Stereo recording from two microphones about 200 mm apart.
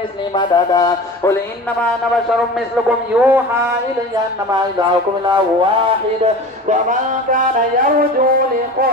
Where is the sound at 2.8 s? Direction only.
10° right (ahead or behind).